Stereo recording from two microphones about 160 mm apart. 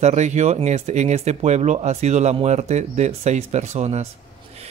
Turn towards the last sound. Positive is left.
turn(degrees=-40)  # may be behind; listen again after turning